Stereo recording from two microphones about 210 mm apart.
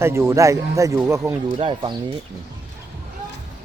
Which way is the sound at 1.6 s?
25° right (ahead or behind).